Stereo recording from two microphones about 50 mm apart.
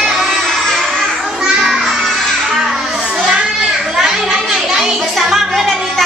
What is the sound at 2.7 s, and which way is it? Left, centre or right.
Children playing, centre.